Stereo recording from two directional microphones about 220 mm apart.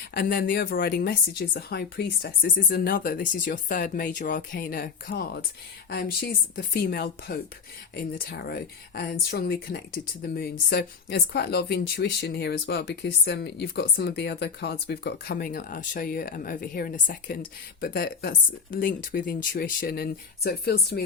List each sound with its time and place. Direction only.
0.1 s speech: 45° left (ahead or behind)